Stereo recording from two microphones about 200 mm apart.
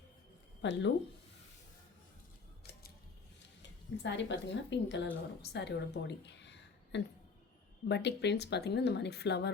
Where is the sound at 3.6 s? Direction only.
65° left (ahead or behind).